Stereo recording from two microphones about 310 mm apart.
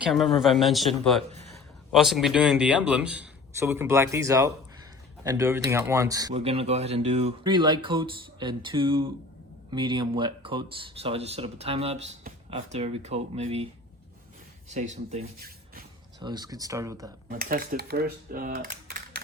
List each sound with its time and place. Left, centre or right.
0.1 s a man's voice: centre
14.7 s speech: right
17.2 s typing: right